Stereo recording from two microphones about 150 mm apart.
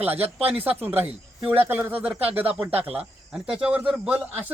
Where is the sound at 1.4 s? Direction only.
15° right (ahead or behind).